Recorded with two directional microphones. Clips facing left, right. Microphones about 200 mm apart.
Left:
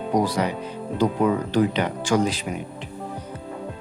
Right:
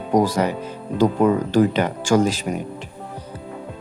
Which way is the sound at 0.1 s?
45° right (ahead or behind).